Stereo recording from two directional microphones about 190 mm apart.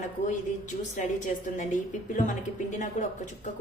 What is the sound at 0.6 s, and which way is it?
A woman's voice, 40° left (ahead or behind).